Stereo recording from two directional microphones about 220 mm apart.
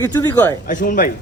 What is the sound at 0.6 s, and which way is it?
Speech, 40° left (ahead or behind).